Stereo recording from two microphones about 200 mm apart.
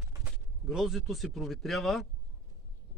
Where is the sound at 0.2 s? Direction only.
5° right (ahead or behind).